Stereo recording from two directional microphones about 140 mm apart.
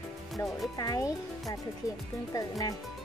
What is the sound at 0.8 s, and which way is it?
Speech, 25° left (ahead or behind).